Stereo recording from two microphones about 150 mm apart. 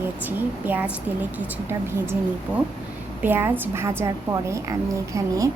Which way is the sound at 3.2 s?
15° right (ahead or behind).